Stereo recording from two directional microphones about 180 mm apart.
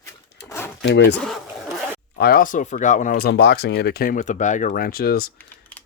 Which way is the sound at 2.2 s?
55° left (ahead or behind).